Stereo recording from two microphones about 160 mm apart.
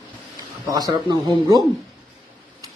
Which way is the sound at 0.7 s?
25° right (ahead or behind).